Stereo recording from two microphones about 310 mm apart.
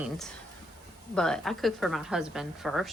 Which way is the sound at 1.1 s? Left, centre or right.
Centre.